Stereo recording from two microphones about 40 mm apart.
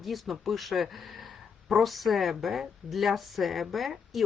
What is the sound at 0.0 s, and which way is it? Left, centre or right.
Speech, centre.